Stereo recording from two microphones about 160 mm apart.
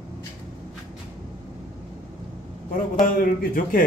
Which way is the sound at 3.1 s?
60° left (ahead or behind).